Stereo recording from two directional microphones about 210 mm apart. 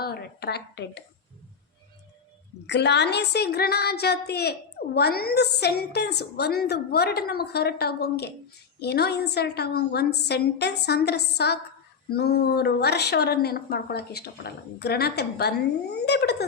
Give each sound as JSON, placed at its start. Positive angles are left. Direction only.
{"t": 0.0, "sound": "a woman's voice", "side_deg": 50}
{"t": 2.6, "sound": "a woman's voice", "side_deg": 55}